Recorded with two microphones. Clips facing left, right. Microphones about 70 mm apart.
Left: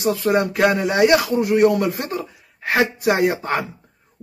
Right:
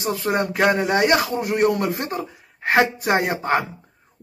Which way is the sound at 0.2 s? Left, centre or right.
Centre.